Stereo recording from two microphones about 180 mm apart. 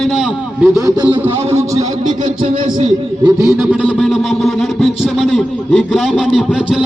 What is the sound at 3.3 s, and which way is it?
A man's voice, 15° right (ahead or behind).